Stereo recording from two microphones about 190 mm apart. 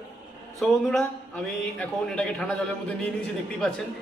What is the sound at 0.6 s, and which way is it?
A man's voice, centre (ahead or behind).